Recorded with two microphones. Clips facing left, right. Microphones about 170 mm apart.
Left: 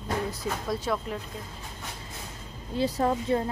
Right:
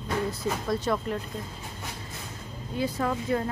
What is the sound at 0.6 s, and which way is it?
Speech, 5° left (ahead or behind).